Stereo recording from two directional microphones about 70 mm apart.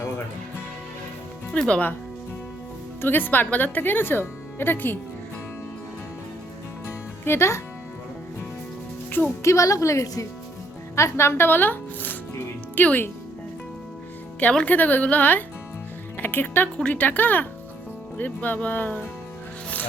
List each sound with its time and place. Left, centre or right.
1.5 s speech: centre
3.0 s speech: left
7.3 s speech: left
9.4 s speech: left
14.5 s speech: left